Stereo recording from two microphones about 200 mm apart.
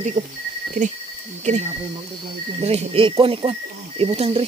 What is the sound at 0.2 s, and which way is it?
Speech, 40° right (ahead or behind).